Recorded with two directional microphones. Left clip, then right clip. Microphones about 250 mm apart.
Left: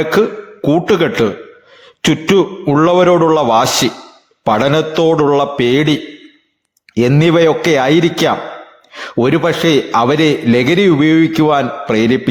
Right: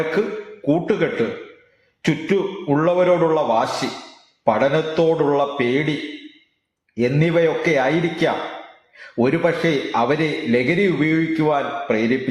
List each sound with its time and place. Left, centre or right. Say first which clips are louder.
0.2 s a man's voice: left 8 dB; left
6.9 s a man's voice: left 7 dB; left